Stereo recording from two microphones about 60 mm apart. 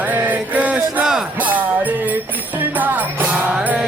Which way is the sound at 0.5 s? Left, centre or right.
Right.